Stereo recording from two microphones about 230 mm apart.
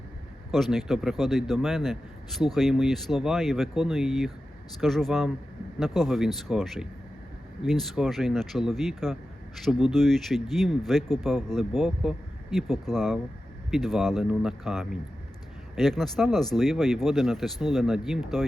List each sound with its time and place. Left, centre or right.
0.5 s a man's voice: centre